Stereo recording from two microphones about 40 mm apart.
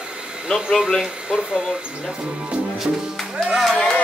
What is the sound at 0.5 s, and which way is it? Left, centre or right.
Speech, centre.